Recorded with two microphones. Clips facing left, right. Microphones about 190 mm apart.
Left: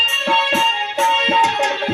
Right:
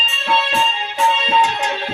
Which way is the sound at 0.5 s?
40° left (ahead or behind).